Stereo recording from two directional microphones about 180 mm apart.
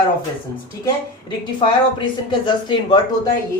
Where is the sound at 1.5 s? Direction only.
25° left (ahead or behind).